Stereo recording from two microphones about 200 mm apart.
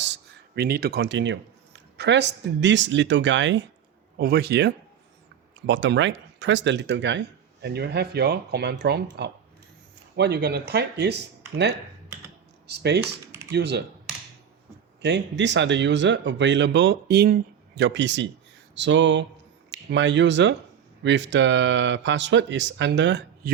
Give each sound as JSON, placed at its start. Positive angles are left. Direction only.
{"t": 0.0, "sound": "speech", "side_deg": -55}
{"t": 4.2, "sound": "speech", "side_deg": -50}
{"t": 15.0, "sound": "speech", "side_deg": -60}